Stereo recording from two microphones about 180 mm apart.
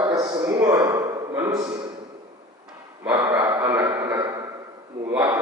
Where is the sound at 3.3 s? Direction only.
20° right (ahead or behind).